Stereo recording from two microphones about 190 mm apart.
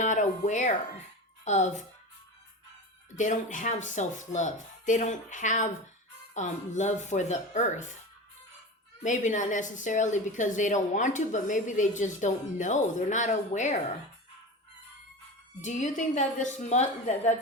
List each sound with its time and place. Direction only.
0.0 s music: 40° left (ahead or behind)
1.5 s a woman's voice: 40° left (ahead or behind)
3.2 s a woman's voice: 40° left (ahead or behind)
9.0 s a woman's voice: 40° left (ahead or behind)
15.6 s a woman's voice: 40° left (ahead or behind)